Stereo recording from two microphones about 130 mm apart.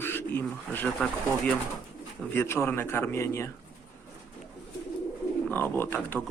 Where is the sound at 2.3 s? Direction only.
20° left (ahead or behind).